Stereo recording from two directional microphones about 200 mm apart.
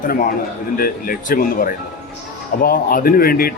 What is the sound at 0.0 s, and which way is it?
Speech, 45° left (ahead or behind).